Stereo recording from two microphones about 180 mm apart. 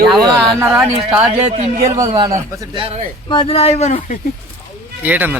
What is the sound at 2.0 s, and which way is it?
Speech, 20° right (ahead or behind).